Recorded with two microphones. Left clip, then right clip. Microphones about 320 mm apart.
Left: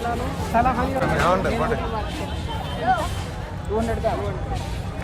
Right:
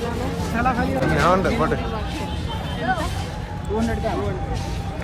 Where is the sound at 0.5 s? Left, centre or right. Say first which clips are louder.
Left 3 dB; left.